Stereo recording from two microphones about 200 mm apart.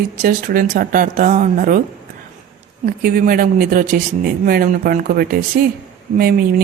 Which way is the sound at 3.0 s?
45° right (ahead or behind).